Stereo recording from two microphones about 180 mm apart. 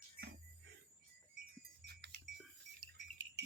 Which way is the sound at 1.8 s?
60° right (ahead or behind).